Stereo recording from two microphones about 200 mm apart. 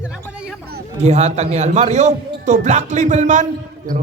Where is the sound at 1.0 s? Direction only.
35° right (ahead or behind).